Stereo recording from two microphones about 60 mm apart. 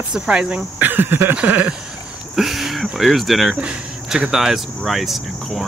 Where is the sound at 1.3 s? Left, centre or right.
Right.